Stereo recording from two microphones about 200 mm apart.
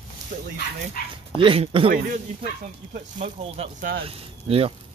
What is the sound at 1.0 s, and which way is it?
Speech, 45° left (ahead or behind).